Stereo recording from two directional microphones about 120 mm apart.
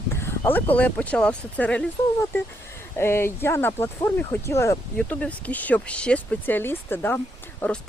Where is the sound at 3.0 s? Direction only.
20° left (ahead or behind).